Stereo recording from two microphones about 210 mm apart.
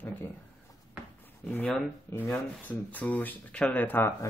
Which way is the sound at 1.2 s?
10° left (ahead or behind).